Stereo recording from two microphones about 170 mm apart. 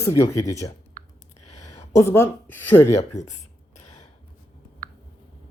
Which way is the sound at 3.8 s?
45° left (ahead or behind).